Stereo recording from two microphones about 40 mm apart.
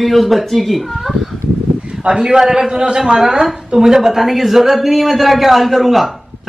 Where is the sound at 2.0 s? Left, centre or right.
Centre.